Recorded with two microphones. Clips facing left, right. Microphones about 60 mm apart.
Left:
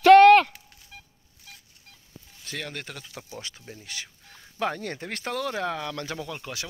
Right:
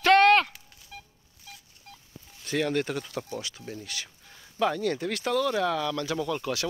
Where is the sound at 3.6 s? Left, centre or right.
Centre; by 6.1 s left.